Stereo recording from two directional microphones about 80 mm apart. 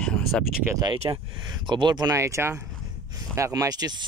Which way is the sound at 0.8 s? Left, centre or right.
Right.